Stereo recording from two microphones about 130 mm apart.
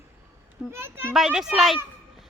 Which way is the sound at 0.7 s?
20° right (ahead or behind).